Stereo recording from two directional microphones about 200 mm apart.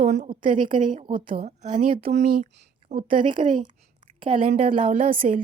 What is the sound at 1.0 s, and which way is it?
Speech, 25° right (ahead or behind).